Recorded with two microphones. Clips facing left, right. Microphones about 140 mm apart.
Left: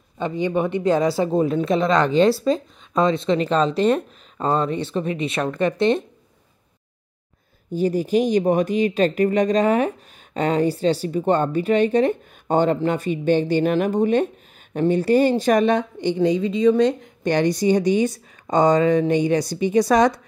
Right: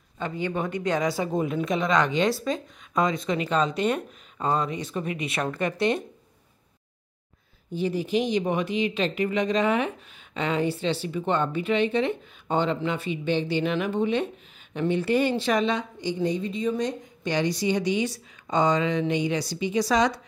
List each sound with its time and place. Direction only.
0.2 s speech: 20° left (ahead or behind)
7.7 s speech: 45° left (ahead or behind)